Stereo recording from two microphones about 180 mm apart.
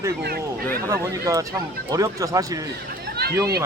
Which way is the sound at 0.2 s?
60° right (ahead or behind).